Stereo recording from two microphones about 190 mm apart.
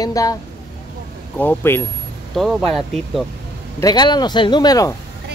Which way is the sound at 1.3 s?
10° left (ahead or behind).